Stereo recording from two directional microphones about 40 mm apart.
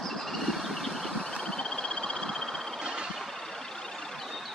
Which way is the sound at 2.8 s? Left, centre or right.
Right.